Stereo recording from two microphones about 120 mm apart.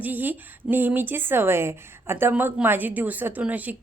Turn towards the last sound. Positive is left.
turn(degrees=-15)  # may be behind; listen again after turning